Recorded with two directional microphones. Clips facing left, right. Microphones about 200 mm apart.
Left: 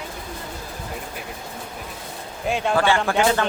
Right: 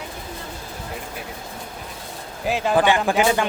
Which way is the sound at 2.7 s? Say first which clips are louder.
Right 2 dB; 15° right (ahead or behind).